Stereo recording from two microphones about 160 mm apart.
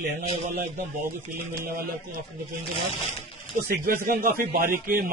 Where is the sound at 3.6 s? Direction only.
65° right (ahead or behind).